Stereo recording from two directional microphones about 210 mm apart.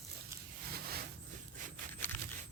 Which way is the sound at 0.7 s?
45° right (ahead or behind).